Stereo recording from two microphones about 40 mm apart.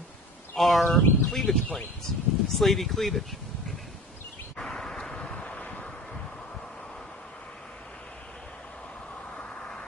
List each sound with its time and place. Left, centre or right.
0.6 s speech: centre
4.6 s vehicle: centre
5.6 s wind: left